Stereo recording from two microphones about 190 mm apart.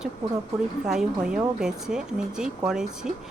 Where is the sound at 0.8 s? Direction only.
5° right (ahead or behind).